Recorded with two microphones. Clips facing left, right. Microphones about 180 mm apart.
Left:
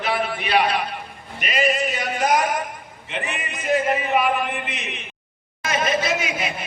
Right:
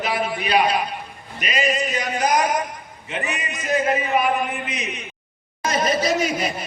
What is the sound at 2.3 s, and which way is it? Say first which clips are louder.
Speech: right 1 dB; 40° right (ahead or behind).